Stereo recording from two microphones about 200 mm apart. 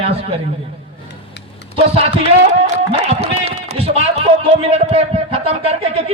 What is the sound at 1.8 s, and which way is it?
Speech, 30° right (ahead or behind).